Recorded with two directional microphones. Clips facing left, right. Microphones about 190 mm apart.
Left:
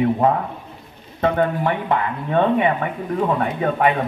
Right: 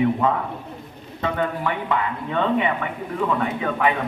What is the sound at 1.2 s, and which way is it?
Speech, 50° left (ahead or behind).